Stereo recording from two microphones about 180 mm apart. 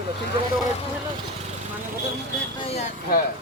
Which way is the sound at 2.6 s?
35° left (ahead or behind).